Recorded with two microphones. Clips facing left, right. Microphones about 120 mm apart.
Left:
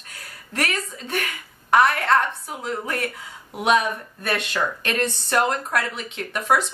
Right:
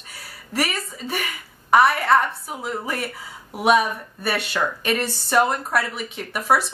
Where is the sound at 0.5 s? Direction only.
5° right (ahead or behind).